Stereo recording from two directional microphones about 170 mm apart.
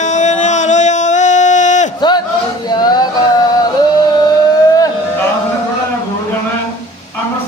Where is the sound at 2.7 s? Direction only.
25° left (ahead or behind).